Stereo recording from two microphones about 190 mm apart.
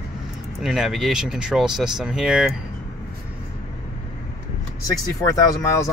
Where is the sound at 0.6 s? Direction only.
5° right (ahead or behind).